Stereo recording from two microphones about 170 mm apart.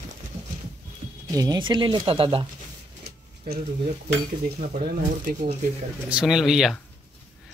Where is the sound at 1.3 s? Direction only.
20° right (ahead or behind).